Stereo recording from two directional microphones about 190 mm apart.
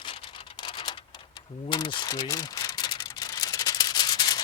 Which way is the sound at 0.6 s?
25° left (ahead or behind).